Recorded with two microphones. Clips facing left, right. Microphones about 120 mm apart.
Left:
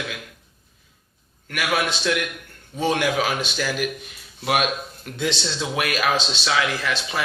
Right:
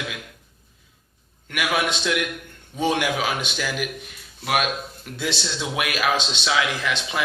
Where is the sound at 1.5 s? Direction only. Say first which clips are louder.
Even; 15° right (ahead or behind).